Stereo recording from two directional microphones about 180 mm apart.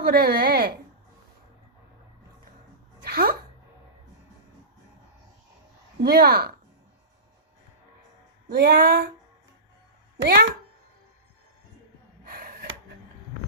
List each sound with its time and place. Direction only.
0.0 s a woman's voice: 60° right (ahead or behind)
3.0 s a sound: 55° right (ahead or behind)
6.0 s a woman's voice: 60° right (ahead or behind)
8.4 s a woman's voice: 65° right (ahead or behind)
10.2 s speech: 60° right (ahead or behind)
12.2 s a sound: 55° right (ahead or behind)